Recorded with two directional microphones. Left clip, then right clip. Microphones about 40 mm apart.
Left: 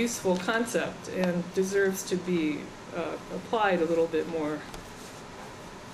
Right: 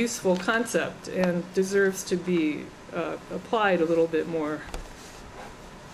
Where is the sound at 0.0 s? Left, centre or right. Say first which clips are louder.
Right 3 dB; right.